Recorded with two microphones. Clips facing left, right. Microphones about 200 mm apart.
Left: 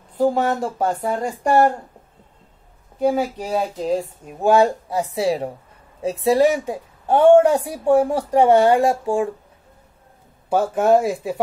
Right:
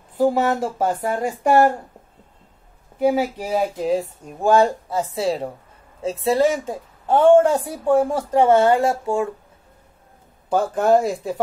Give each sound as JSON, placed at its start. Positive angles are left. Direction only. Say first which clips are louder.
{"t": 0.2, "sound": "speech", "louder": "even", "side_deg": -5}
{"t": 3.0, "sound": "a woman's voice", "louder": "right 1 dB", "side_deg": -10}
{"t": 10.5, "sound": "a woman's voice", "louder": "left 1 dB", "side_deg": 5}